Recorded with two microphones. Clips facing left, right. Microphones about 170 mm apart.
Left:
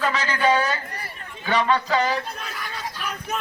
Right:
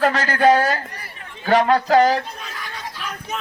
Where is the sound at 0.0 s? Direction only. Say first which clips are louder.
Right 6 dB; 50° right (ahead or behind).